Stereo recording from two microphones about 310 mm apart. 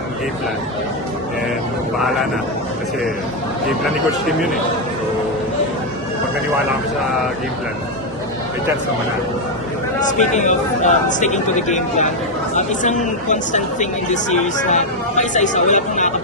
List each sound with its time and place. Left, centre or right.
10.1 s speech: left